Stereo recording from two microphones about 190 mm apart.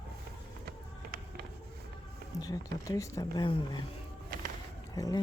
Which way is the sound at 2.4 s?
20° left (ahead or behind).